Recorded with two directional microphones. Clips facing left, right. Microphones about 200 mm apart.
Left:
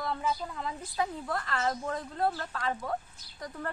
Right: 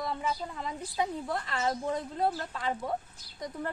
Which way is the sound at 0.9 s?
20° right (ahead or behind).